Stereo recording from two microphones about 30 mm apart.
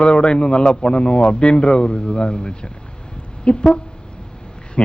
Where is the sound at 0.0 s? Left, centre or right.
Left.